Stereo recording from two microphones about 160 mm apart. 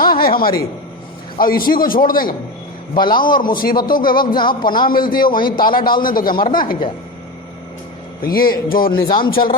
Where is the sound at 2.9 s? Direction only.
30° left (ahead or behind).